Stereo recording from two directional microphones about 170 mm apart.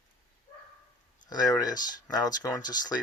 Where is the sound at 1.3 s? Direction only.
20° left (ahead or behind).